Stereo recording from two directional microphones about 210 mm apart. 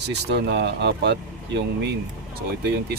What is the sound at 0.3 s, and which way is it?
Speech, 55° right (ahead or behind).